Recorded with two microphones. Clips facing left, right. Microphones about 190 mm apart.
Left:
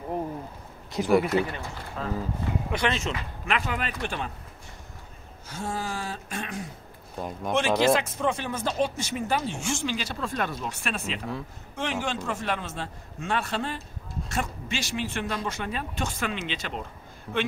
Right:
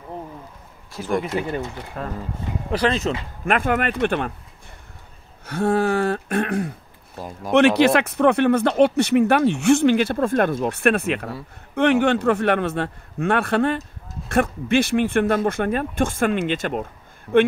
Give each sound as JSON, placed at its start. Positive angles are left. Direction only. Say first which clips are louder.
{"t": 1.0, "sound": "speech", "louder": "left 3 dB", "side_deg": 20}
{"t": 1.3, "sound": "speech", "louder": "right 2 dB", "side_deg": -25}
{"t": 2.0, "sound": "speech", "louder": "right 2 dB", "side_deg": -55}
{"t": 2.7, "sound": "speech", "louder": "right 9 dB", "side_deg": -35}
{"t": 3.4, "sound": "speech", "louder": "right 9 dB", "side_deg": -55}
{"t": 5.5, "sound": "speech", "louder": "right 13 dB", "side_deg": -65}
{"t": 7.2, "sound": "speech", "louder": "even", "side_deg": 0}
{"t": 7.5, "sound": "speech", "louder": "right 8 dB", "side_deg": -65}
{"t": 17.3, "sound": "speech", "louder": "right 13 dB", "side_deg": 0}